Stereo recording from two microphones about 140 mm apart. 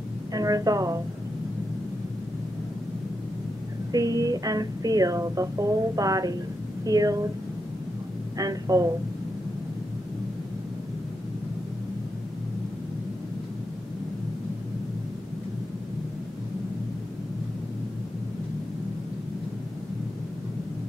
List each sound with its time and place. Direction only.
0.3 s a sound: 25° right (ahead or behind)
3.9 s speech: 25° right (ahead or behind)
8.4 s speech: 25° right (ahead or behind)